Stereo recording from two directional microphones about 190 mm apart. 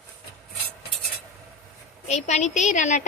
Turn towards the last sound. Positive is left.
turn(degrees=40)  # may be behind; listen again after turning